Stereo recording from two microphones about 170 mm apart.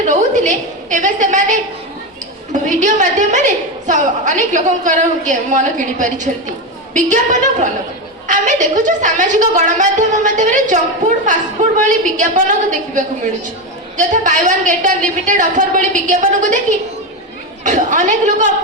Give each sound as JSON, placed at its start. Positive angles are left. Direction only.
{"t": 0.0, "sound": "a woman's voice", "side_deg": -45}
{"t": 11.8, "sound": "a woman's voice", "side_deg": -50}